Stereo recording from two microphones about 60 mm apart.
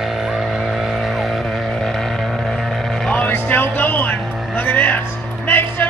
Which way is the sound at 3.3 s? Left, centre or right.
Left.